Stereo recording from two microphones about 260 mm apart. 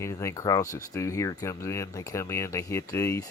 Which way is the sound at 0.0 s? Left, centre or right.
Centre.